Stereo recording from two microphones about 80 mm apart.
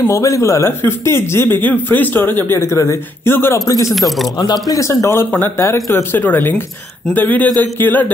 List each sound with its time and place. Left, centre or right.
0.0 s speech: left
3.9 s speech: centre
4.4 s speech: left
4.7 s speech: left
6.1 s speech: left
7.4 s speech: right
7.7 s speech: left